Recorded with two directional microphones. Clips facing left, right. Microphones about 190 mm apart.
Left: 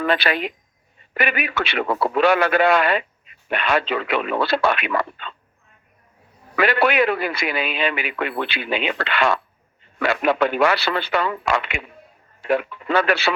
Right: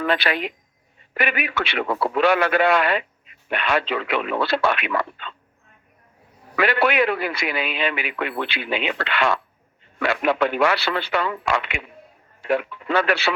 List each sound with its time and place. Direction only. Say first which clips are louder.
0.0 s a man's voice: left 1 dB; 40° left (ahead or behind)
6.6 s a man's voice: left 1 dB; 40° left (ahead or behind)